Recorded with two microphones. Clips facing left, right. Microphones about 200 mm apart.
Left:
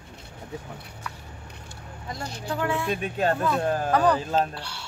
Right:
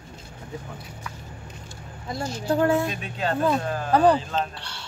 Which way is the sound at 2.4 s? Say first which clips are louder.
Right 7 dB; 40° right (ahead or behind).